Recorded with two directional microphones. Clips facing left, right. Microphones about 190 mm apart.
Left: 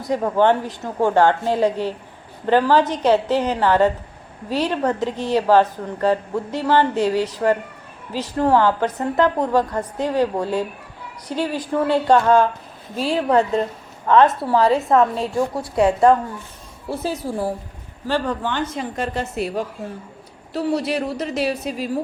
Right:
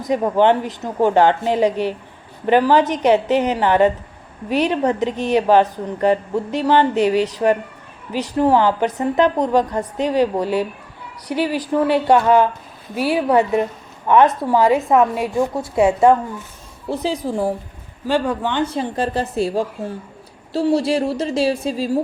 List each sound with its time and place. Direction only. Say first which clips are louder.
0.0 s a woman's voice: right 2 dB; 15° right (ahead or behind)
18.6 s a woman's voice: right 4 dB; 30° right (ahead or behind)